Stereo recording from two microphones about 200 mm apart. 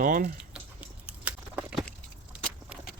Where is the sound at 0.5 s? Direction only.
5° right (ahead or behind).